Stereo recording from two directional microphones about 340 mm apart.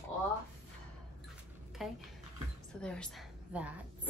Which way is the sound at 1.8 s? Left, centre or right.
Centre.